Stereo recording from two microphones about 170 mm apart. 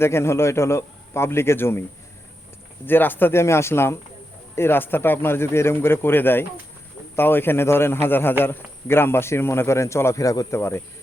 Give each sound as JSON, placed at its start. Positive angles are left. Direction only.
{"t": 0.0, "sound": "speech", "side_deg": 15}
{"t": 2.8, "sound": "speech", "side_deg": 10}